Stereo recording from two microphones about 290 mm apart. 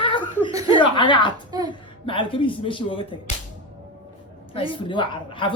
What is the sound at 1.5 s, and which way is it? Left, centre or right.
Speech, centre.